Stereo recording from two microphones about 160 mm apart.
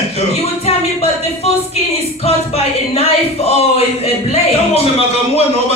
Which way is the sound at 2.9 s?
40° left (ahead or behind).